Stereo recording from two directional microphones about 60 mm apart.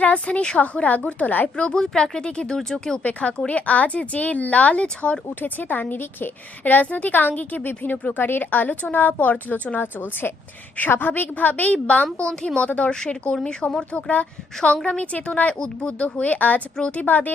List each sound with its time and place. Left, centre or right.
0.0 s a woman's voice: left
3.0 s a woman's voice: left
5.4 s a woman's voice: left; by 14.0 s centre
14.1 s a woman's voice: left